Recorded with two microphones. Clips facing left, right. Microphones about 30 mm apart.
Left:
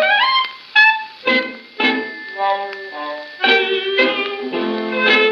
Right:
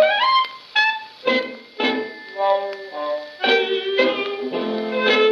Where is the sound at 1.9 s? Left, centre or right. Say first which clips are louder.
Left 2 dB; centre.